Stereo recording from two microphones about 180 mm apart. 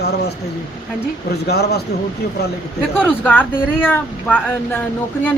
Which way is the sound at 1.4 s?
65° left (ahead or behind).